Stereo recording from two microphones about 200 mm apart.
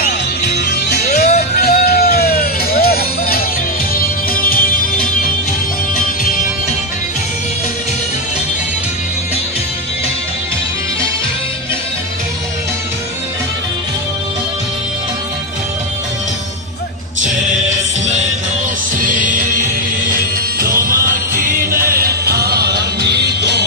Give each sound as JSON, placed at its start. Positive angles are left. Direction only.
{"t": 0.5, "sound": "music", "side_deg": 55}
{"t": 18.9, "sound": "music", "side_deg": -40}